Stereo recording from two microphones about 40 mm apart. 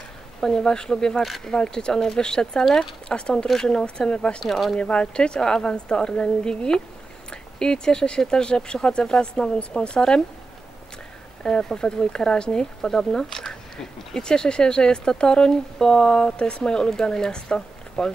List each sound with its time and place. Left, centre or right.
0.4 s speech: centre
1.2 s speech: centre
1.5 s speech: centre
4.5 s speech: centre
4.7 s speech: left
11.4 s speech: centre